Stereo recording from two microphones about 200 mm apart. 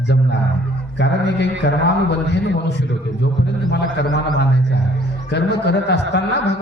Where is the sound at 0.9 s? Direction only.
60° left (ahead or behind).